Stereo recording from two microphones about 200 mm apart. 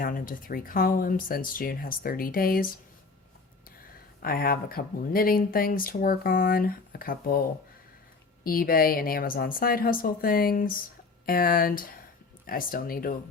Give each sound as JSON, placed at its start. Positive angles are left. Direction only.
{"t": 0.0, "sound": "speech", "side_deg": 45}
{"t": 4.2, "sound": "speech", "side_deg": 50}
{"t": 8.4, "sound": "speech", "side_deg": 45}